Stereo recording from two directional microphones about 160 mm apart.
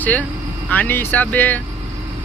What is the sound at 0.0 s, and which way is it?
Speech, 10° left (ahead or behind).